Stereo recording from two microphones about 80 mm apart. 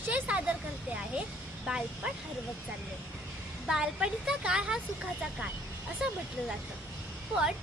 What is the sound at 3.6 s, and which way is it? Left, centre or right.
A woman's voice, centre.